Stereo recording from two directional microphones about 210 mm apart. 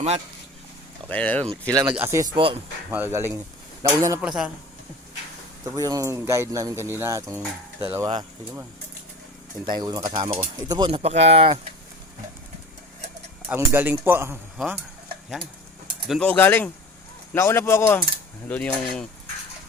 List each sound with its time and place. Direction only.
1.0 s speech: 5° left (ahead or behind)
1.7 s speech: 15° right (ahead or behind)
2.3 s speech: 25° right (ahead or behind)
2.9 s speech: 10° right (ahead or behind)
4.3 s cutlery: 5° right (ahead or behind)
5.6 s speech: 15° right (ahead or behind)
9.6 s speech: 20° right (ahead or behind)
13.6 s speech: 10° right (ahead or behind)
16.0 s speech: 5° left (ahead or behind)
18.4 s cutlery: 5° left (ahead or behind)